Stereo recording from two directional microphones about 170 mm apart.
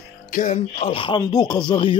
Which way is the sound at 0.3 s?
45° left (ahead or behind).